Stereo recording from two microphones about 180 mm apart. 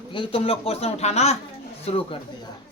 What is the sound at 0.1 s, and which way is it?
Speech, 30° left (ahead or behind).